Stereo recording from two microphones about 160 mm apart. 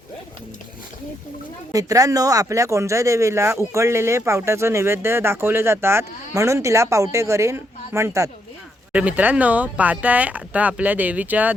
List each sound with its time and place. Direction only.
1.7 s speech: 20° right (ahead or behind)